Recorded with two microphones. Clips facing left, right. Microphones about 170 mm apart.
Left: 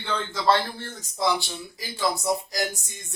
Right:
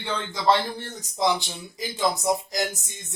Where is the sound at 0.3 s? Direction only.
15° right (ahead or behind).